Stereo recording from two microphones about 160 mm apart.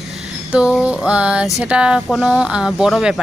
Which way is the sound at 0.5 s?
5° right (ahead or behind).